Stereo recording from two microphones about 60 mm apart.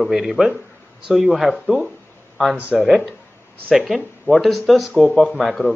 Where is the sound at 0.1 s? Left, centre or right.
Centre.